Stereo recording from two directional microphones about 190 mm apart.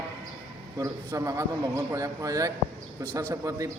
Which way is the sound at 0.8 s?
15° right (ahead or behind).